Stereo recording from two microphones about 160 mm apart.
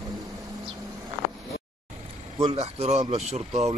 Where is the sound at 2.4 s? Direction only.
35° right (ahead or behind).